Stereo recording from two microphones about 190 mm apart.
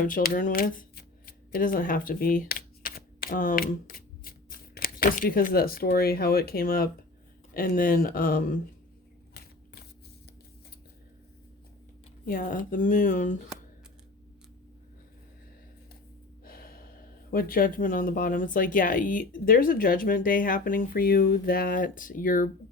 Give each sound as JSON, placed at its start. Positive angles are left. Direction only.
{"t": 0.0, "sound": "speech", "side_deg": 45}
{"t": 9.3, "sound": "a sound", "side_deg": 55}
{"t": 12.2, "sound": "speech", "side_deg": 45}
{"t": 16.4, "sound": "gasp", "side_deg": 50}
{"t": 17.3, "sound": "speech", "side_deg": 50}